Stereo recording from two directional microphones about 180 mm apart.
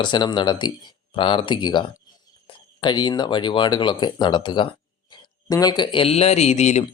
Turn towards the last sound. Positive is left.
turn(degrees=40)  # may be behind; listen again after turning